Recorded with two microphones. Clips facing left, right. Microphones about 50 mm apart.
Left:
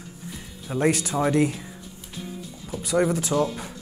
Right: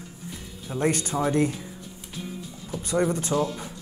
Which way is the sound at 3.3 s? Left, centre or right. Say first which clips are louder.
Left 2 dB; centre.